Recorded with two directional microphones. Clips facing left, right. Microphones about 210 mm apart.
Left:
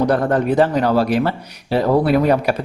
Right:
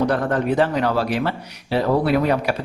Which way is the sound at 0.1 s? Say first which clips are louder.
Left 4 dB; 40° left (ahead or behind).